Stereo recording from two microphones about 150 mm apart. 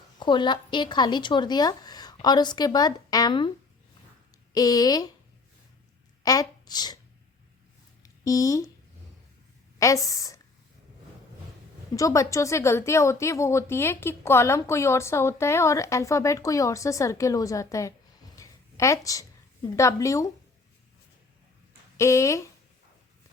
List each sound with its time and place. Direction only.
0.2 s a woman's voice: 30° left (ahead or behind)
4.5 s a woman's voice: 25° left (ahead or behind)
6.2 s speech: 25° left (ahead or behind)
8.0 s speech: 20° left (ahead or behind)
9.7 s a woman's voice: 20° left (ahead or behind)
11.9 s a woman's voice: 20° left (ahead or behind)
18.3 s a sound: 20° left (ahead or behind)
19.6 s a woman's voice: 20° left (ahead or behind)
21.9 s a woman's voice: 20° left (ahead or behind)